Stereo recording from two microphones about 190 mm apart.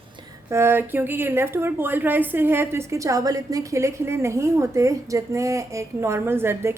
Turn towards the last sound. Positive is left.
turn(degrees=-15)  # may be behind; listen again after turning